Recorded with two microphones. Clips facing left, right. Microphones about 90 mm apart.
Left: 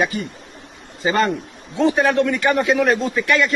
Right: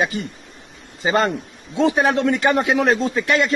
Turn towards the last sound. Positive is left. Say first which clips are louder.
# even
turn(degrees=-25)  # may be behind; listen again after turning